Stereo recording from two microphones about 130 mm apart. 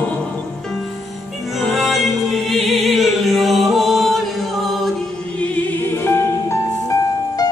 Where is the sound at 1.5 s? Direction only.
Centre (ahead or behind).